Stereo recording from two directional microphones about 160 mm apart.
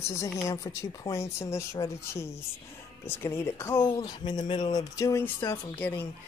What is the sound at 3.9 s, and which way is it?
Speech, 25° left (ahead or behind).